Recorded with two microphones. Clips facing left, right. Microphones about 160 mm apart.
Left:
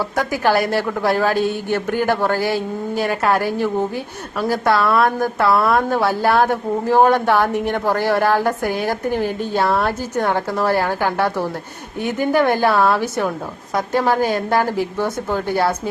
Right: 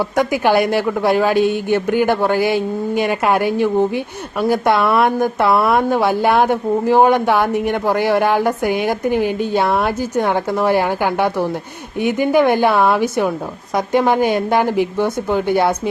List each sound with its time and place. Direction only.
0.0 s a woman's voice: 15° right (ahead or behind)